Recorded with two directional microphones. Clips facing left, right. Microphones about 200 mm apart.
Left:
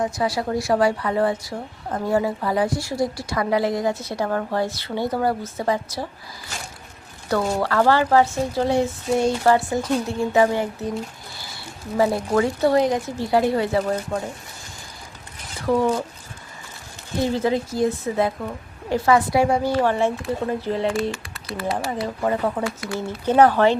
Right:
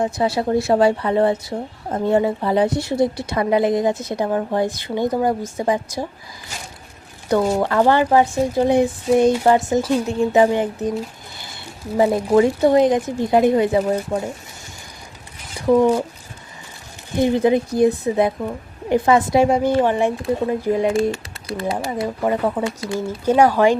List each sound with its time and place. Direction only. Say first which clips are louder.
0.0 s a woman's voice: right 3 dB; 25° right (ahead or behind)
7.3 s speech: right 4 dB; 15° right (ahead or behind)
11.9 s a woman's voice: right 4 dB; 20° right (ahead or behind)
15.6 s speech: right 5 dB; 15° right (ahead or behind)
17.2 s a woman's voice: right 5 dB; 15° right (ahead or behind)
23.0 s speech: right 1 dB; 10° right (ahead or behind)